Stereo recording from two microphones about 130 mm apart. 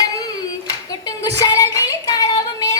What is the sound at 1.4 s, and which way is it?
Child singing, 25° left (ahead or behind).